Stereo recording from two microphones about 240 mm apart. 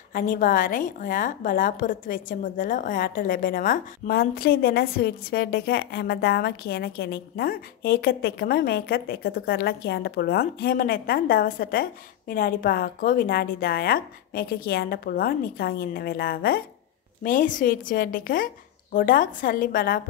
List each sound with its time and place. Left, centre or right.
0.1 s a woman's voice: left